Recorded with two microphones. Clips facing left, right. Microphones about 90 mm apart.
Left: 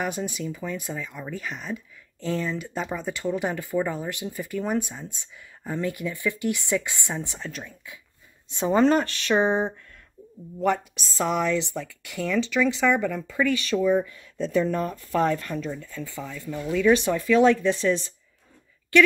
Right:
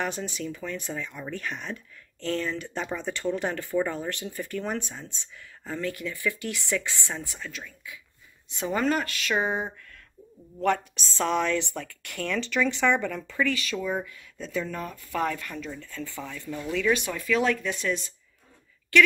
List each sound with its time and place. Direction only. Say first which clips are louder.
0.0 s speech: left 2 dB; 10° left (ahead or behind)
10.6 s speech: left 1 dB; 5° left (ahead or behind)
13.4 s speech: left 4 dB; 25° left (ahead or behind)
14.0 s speech: left 9 dB; 35° left (ahead or behind)
15.7 s speech: left 3 dB; 10° left (ahead or behind)
16.9 s speech: left 8 dB; 30° left (ahead or behind)